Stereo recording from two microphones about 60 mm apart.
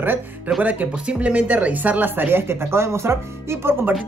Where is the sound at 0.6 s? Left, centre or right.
Right.